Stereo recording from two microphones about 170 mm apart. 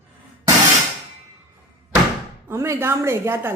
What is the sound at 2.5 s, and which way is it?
Speech, 15° right (ahead or behind).